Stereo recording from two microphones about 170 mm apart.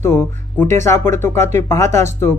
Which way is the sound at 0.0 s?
15° left (ahead or behind).